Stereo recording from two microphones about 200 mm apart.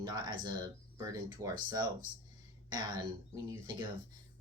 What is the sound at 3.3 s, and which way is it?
Speech, 15° right (ahead or behind).